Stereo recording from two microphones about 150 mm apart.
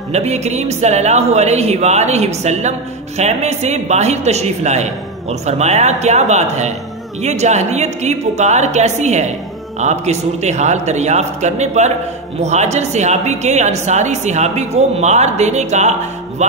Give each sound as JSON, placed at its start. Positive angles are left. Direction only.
{"t": 0.1, "sound": "a woman's voice", "side_deg": -45}